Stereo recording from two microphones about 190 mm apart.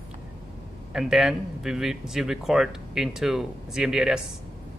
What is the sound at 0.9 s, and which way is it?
Speech, centre (ahead or behind).